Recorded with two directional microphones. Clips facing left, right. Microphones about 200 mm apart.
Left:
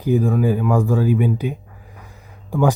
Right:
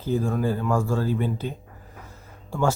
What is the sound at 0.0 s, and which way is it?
Speech, 15° left (ahead or behind).